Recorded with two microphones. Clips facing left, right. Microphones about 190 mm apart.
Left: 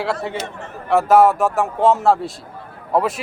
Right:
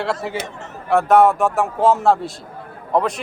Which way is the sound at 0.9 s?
Centre (ahead or behind).